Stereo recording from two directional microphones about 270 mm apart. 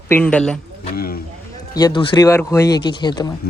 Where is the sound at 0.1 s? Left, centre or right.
Centre.